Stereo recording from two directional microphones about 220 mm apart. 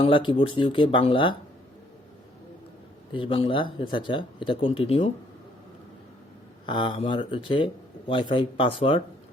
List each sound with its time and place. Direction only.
0.0 s speech: 20° left (ahead or behind)
3.1 s speech: 25° left (ahead or behind)
6.7 s speech: 20° left (ahead or behind)